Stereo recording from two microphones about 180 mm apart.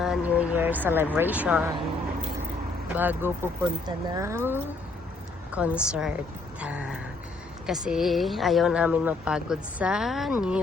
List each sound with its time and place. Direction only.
0.0 s speech: 5° right (ahead or behind)
2.9 s a woman's voice: 10° right (ahead or behind)